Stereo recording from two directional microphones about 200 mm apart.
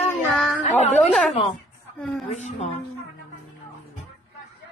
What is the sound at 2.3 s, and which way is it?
Speech, 35° left (ahead or behind).